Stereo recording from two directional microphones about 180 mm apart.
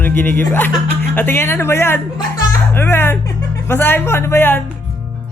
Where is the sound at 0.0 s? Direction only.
10° left (ahead or behind).